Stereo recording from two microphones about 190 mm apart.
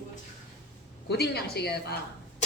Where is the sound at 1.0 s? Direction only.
60° left (ahead or behind).